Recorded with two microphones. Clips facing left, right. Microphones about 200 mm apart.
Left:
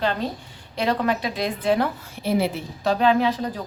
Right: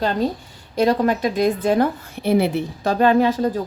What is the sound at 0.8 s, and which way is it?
A woman's voice, 45° right (ahead or behind).